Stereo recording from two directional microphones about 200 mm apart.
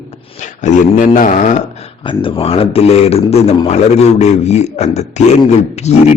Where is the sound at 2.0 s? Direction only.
25° left (ahead or behind).